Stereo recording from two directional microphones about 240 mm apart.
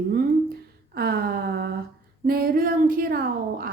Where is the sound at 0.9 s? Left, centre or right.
Right.